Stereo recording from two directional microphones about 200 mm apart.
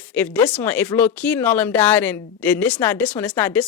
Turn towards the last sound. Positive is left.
turn(degrees=10)  # may be behind; listen again after turning